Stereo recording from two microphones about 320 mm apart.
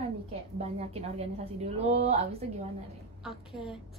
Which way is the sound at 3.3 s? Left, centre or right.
Centre.